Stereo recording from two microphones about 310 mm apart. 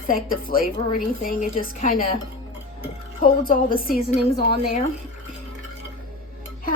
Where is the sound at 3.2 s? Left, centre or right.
Left.